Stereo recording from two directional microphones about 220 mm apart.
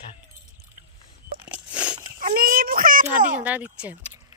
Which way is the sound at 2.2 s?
40° right (ahead or behind).